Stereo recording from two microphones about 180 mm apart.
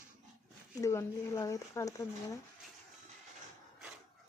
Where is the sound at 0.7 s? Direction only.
20° left (ahead or behind).